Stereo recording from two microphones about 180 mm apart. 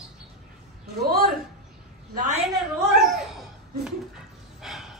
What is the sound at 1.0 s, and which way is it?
Speech, 55° right (ahead or behind).